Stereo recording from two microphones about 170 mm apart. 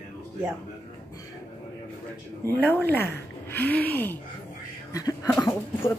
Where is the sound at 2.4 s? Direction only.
10° left (ahead or behind).